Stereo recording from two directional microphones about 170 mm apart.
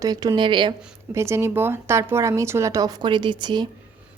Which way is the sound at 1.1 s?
15° right (ahead or behind).